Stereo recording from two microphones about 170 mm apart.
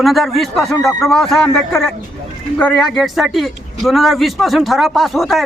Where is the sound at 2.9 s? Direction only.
Centre (ahead or behind).